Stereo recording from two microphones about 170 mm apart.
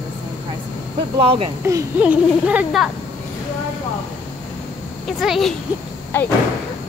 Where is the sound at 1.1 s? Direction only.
30° right (ahead or behind).